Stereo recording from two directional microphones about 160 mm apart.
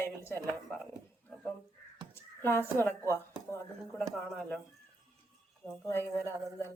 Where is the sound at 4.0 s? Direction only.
5° left (ahead or behind).